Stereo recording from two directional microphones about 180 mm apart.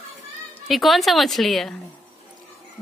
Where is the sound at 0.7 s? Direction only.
Centre (ahead or behind).